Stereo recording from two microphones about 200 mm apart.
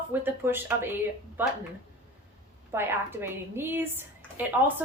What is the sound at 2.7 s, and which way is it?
A woman's voice, 10° right (ahead or behind).